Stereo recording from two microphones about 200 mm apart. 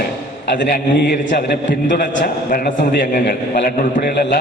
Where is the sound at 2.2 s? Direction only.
45° left (ahead or behind).